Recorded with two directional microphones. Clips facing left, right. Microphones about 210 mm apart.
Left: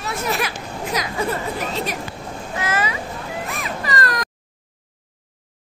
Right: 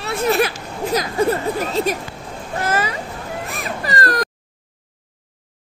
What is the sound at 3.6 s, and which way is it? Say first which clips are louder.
Baby cry: right 3 dB; 35° right (ahead or behind).